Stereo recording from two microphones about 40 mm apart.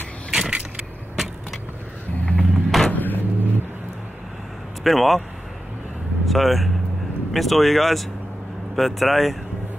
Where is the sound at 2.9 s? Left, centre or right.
Left.